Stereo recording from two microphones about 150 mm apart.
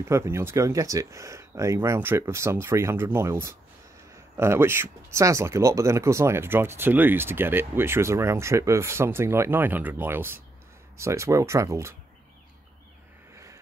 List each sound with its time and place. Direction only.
0.1 s speech: 20° right (ahead or behind)